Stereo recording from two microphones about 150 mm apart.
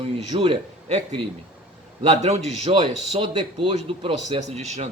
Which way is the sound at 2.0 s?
45° right (ahead or behind).